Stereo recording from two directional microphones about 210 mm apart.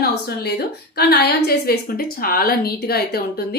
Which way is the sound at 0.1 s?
50° left (ahead or behind).